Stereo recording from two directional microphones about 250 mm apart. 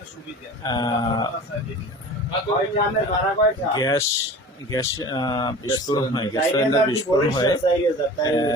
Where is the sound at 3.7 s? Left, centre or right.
Centre.